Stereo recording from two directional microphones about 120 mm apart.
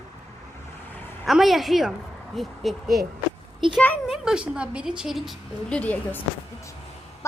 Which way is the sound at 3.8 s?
10° left (ahead or behind).